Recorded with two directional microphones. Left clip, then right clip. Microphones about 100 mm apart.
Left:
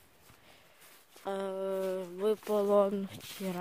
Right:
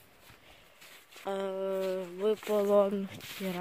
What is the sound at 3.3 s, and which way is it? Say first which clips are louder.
Speech: right 2 dB; 20° left (ahead or behind).